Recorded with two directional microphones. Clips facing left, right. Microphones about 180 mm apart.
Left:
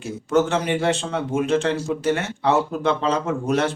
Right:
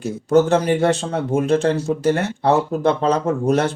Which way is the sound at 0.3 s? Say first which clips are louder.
Right 5 dB; 40° right (ahead or behind).